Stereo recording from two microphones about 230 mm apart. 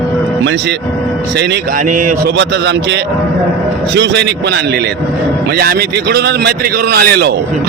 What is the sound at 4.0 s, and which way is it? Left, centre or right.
Speech, right.